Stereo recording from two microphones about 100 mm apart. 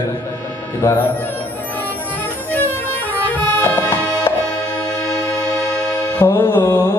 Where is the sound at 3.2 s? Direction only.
20° left (ahead or behind).